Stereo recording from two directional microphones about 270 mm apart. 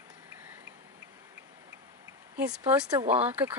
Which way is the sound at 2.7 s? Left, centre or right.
Centre.